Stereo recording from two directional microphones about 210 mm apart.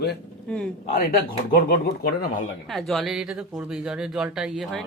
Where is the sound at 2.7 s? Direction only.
Centre (ahead or behind).